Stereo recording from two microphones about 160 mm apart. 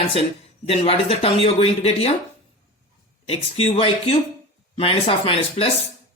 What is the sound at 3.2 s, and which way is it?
Speech, 40° left (ahead or behind).